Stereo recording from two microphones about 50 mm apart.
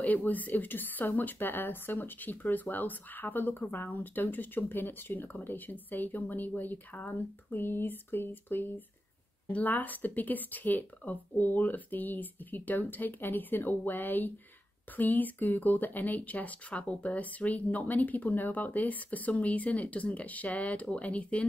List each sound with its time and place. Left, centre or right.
0.0 s a woman's voice: left
7.5 s a woman's voice: left